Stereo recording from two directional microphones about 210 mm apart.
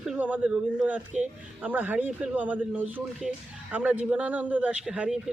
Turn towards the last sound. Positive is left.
turn(degrees=0)  # may be behind; listen again after turning